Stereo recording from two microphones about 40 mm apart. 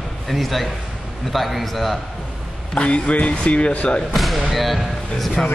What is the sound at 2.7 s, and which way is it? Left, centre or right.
Speech, left.